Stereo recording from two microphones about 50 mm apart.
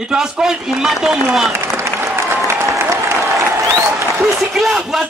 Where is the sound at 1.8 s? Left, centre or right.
Right.